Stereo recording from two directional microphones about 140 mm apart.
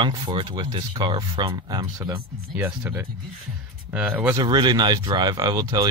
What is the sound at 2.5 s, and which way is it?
Speech, 15° right (ahead or behind).